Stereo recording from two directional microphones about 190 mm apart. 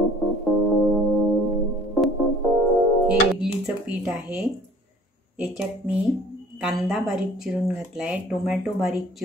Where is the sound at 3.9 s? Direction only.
5° right (ahead or behind).